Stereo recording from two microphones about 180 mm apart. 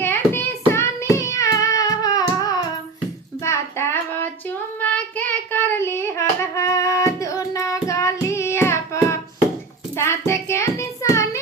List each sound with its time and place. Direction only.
0.0 s hands: 10° left (ahead or behind)
0.7 s child singing: 15° left (ahead or behind)